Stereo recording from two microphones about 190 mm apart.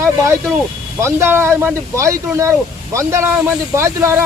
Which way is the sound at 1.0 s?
10° right (ahead or behind).